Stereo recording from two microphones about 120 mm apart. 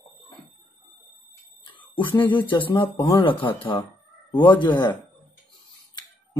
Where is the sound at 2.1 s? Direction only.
15° left (ahead or behind).